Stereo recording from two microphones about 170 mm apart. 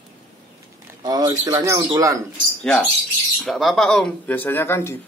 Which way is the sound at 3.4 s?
Centre (ahead or behind).